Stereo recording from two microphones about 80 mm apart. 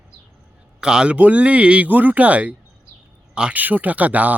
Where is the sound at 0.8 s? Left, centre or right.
Centre.